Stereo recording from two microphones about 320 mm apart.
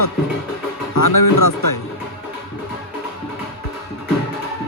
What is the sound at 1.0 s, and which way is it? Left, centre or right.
Speech, left.